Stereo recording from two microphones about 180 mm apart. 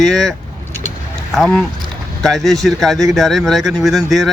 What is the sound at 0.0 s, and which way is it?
Vehicle, centre (ahead or behind).